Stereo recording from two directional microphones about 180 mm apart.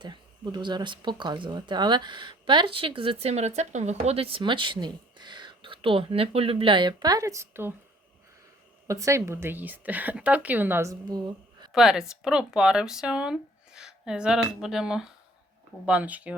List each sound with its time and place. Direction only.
0.0 s speech: 25° right (ahead or behind)
8.9 s a woman's voice: 15° right (ahead or behind)
11.7 s a woman's voice: centre (ahead or behind)